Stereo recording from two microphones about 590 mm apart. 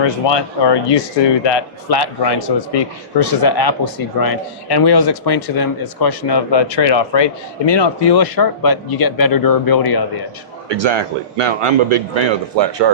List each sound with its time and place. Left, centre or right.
0.0 s speech: left
10.7 s a man's voice: right